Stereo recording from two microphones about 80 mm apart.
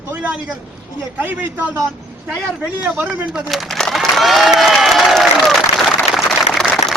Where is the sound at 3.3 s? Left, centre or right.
Centre.